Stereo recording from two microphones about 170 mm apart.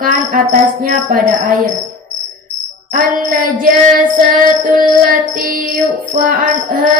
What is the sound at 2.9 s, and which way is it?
Music, 55° right (ahead or behind).